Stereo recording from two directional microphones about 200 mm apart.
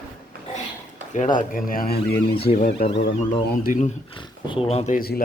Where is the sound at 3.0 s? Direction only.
50° left (ahead or behind).